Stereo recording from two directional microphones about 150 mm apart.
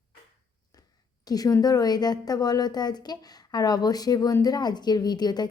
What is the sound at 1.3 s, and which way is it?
A woman's voice, 25° left (ahead or behind).